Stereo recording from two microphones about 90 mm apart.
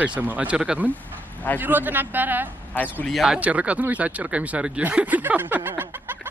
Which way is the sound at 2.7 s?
20° left (ahead or behind).